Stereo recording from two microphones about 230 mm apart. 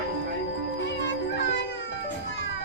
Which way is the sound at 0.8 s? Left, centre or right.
Left.